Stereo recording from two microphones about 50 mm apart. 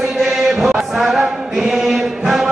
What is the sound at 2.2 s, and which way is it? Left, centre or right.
Music, centre.